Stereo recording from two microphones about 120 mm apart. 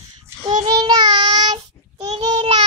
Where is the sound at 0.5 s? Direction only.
40° right (ahead or behind).